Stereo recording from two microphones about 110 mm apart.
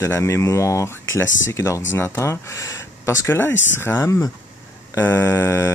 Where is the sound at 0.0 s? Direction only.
25° left (ahead or behind).